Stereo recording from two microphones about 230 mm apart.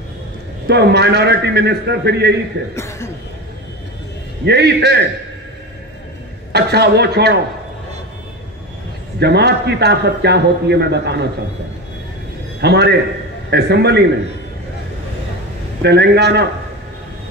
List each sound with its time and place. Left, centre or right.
0.7 s a man's voice: right
2.7 s speech: centre
4.5 s a man's voice: right
6.5 s a man's voice: right
9.2 s a man's voice: right
12.5 s a man's voice: right
15.8 s a man's voice: right